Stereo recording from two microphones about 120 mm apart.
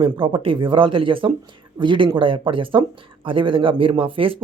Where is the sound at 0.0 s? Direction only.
45° right (ahead or behind).